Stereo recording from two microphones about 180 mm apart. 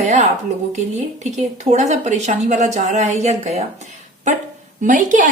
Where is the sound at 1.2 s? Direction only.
40° right (ahead or behind).